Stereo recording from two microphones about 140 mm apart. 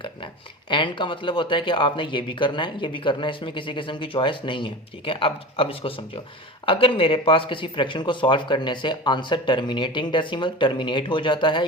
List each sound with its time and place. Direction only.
0.7 s speech: 35° left (ahead or behind)